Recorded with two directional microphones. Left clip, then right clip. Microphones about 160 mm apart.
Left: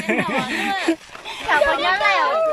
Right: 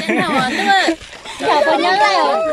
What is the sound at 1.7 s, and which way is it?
Speech, 40° right (ahead or behind).